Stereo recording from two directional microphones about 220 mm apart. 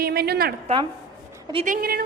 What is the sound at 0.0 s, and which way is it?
Speech, 45° right (ahead or behind).